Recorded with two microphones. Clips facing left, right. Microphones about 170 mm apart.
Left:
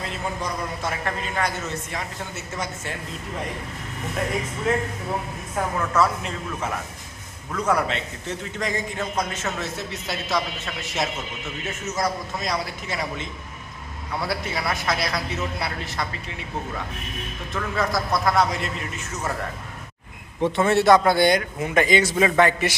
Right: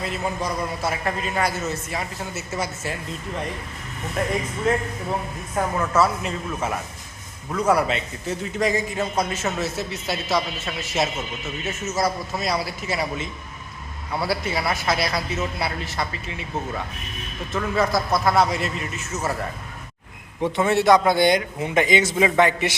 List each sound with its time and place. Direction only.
0.8 s a man's voice: 10° right (ahead or behind)
4.7 s a man's voice: centre (ahead or behind)
17.5 s a man's voice: centre (ahead or behind)
20.4 s a man's voice: 15° right (ahead or behind)